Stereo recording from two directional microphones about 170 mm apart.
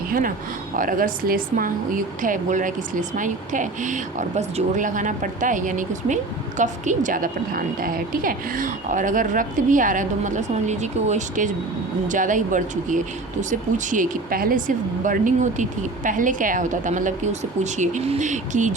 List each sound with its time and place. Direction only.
0.1 s a woman's voice: 55° right (ahead or behind)